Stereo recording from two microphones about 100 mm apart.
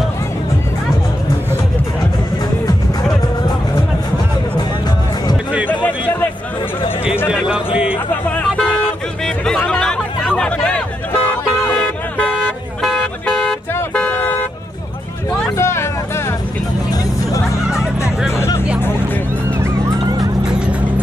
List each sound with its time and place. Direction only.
7.4 s a sound: 10° right (ahead or behind)
8.3 s vehicle: 10° left (ahead or behind)
9.2 s a sound: 5° left (ahead or behind)
11.2 s music: 10° left (ahead or behind)
12.3 s vehicle: centre (ahead or behind)
13.0 s a sound: 5° left (ahead or behind)
13.9 s vehicle: 15° left (ahead or behind)
15.5 s vehicle: 25° left (ahead or behind)
20.4 s vehicle: 10° right (ahead or behind)